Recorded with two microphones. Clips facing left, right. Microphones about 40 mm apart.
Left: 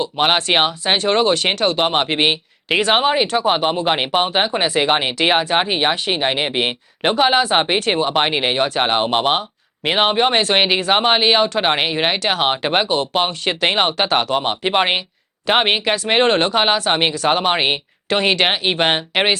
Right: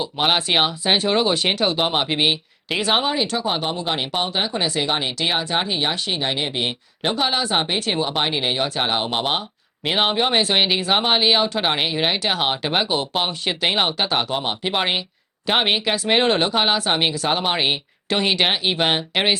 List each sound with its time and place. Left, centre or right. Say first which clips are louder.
0.2 s speech: left 3 dB; centre
0.5 s speech: left 2 dB; left
1.0 s speech: left 6 dB; centre
2.0 s speech: left 3 dB; left
3.0 s speech: left 5 dB; left
7.0 s speech: left 6 dB; left
7.8 s speech: left 5 dB; centre
8.2 s speech: left 4 dB; left
8.5 s speech: left 5 dB; centre
12.2 s speech: left 3 dB; centre
12.5 s speech: left 4 dB; left
16.9 s speech: left 4 dB; centre
17.5 s speech: left 3 dB; left
18.1 s speech: left 3 dB; centre